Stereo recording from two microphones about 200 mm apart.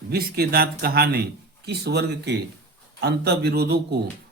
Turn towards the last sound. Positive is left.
turn(degrees=-55)  # may be behind; listen again after turning